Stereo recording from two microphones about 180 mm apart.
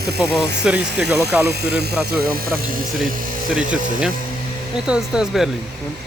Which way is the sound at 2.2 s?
55° right (ahead or behind).